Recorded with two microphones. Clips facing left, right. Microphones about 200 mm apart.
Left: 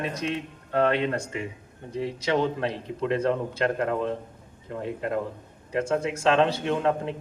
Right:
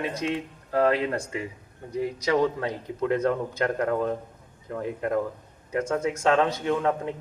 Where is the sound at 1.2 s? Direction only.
30° left (ahead or behind).